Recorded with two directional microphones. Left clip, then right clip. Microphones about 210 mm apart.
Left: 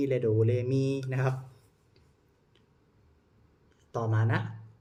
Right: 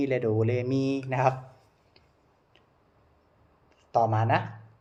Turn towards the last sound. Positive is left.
turn(degrees=15)  # may be behind; listen again after turning